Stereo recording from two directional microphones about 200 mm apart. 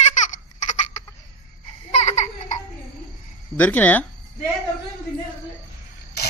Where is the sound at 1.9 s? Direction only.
35° left (ahead or behind).